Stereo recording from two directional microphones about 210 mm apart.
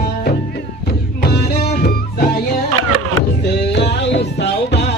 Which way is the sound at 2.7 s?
90° right.